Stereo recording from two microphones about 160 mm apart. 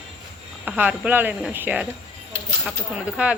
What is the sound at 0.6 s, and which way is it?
Speech, 10° right (ahead or behind).